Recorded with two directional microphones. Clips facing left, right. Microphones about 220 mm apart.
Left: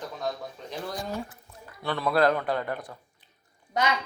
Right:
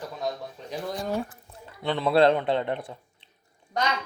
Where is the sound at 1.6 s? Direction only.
20° right (ahead or behind).